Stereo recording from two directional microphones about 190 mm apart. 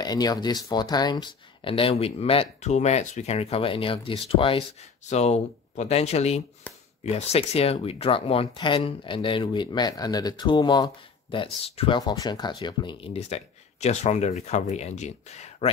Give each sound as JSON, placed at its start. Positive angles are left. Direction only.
{"t": 0.0, "sound": "speech", "side_deg": 20}